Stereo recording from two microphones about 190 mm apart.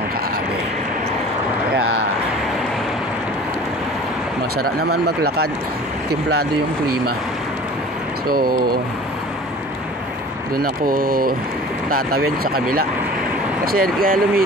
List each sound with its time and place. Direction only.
4.6 s speech: 55° right (ahead or behind)
8.3 s speech: 50° right (ahead or behind)
10.5 s speech: 50° right (ahead or behind)